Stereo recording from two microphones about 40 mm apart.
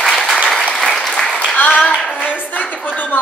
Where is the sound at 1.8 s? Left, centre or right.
Left.